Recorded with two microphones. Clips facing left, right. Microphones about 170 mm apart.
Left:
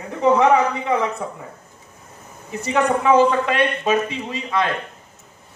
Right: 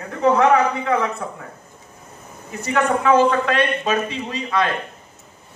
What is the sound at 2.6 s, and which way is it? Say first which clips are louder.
A man's voice: even; 20° left (ahead or behind).